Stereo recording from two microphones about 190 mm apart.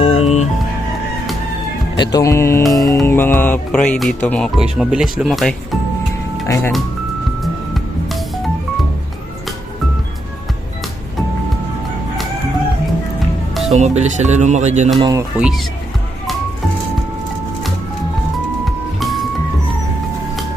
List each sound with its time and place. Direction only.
0.0 s music: 30° left (ahead or behind)
2.0 s speech: 15° left (ahead or behind)
3.1 s music: 10° left (ahead or behind)
3.4 s speech: 5° left (ahead or behind)
6.5 s speech: 10° left (ahead or behind)
7.4 s music: centre (ahead or behind)
13.7 s speech: 35° right (ahead or behind)
14.9 s speech: 25° right (ahead or behind)
15.4 s speech: 5° right (ahead or behind)
18.6 s music: centre (ahead or behind)